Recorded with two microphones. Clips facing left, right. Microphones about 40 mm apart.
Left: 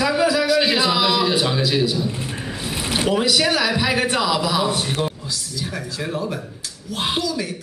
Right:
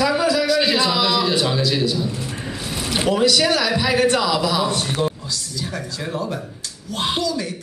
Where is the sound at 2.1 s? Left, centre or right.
Left.